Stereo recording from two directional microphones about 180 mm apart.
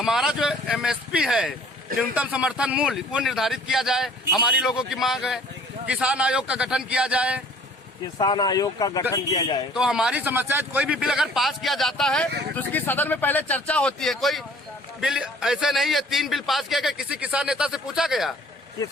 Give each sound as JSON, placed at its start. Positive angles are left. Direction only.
{"t": 0.0, "sound": "a man's voice", "side_deg": -5}
{"t": 8.2, "sound": "speech", "side_deg": 25}
{"t": 9.7, "sound": "a man's voice", "side_deg": -5}